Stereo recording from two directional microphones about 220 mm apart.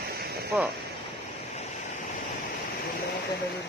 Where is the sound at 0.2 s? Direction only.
45° right (ahead or behind).